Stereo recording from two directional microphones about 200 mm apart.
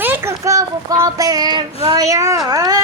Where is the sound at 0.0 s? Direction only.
10° right (ahead or behind).